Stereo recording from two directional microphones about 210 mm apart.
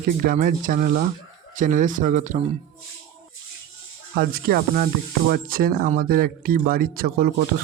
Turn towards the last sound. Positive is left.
turn(degrees=-45)  # may be behind; listen again after turning